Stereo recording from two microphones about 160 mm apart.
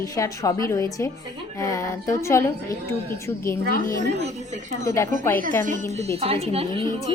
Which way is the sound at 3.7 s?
60° left (ahead or behind).